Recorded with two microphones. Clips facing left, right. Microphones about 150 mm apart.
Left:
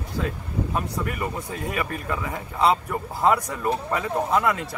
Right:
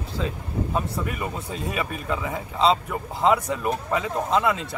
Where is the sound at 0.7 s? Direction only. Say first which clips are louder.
Right 1 dB; 20° right (ahead or behind).